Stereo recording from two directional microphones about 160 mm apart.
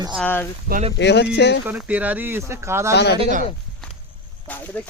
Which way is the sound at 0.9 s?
90° left.